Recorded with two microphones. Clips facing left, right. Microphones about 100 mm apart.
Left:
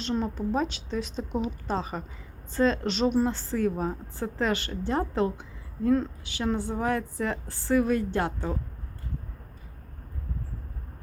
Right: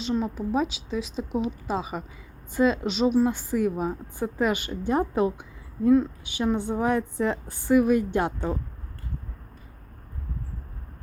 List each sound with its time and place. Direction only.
0.0 s a woman's voice: 5° right (ahead or behind)